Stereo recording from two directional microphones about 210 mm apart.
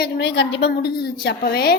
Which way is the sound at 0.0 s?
55° left (ahead or behind).